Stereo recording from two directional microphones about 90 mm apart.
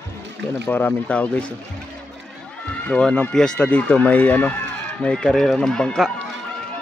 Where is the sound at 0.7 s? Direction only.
20° left (ahead or behind).